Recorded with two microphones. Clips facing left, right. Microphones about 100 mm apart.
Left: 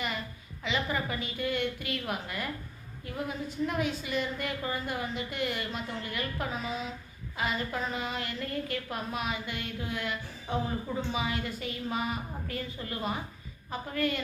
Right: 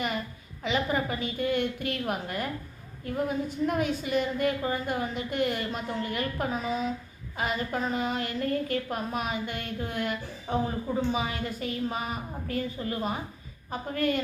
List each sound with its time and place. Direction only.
0.6 s a woman's voice: 45° right (ahead or behind)